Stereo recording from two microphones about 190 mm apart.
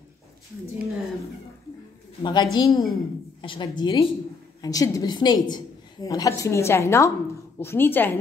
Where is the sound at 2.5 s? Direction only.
20° left (ahead or behind).